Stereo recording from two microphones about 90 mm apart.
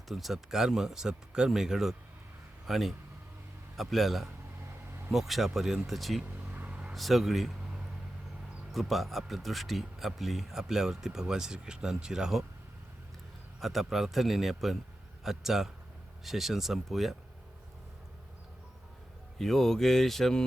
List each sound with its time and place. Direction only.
0.1 s speech: centre (ahead or behind)
6.2 s vehicle: 20° right (ahead or behind)
6.9 s speech: centre (ahead or behind)
8.7 s speech: centre (ahead or behind)
13.6 s speech: centre (ahead or behind)
19.4 s speech: 5° left (ahead or behind)